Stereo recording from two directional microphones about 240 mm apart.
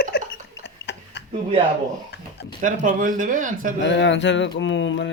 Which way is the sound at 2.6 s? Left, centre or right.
Right.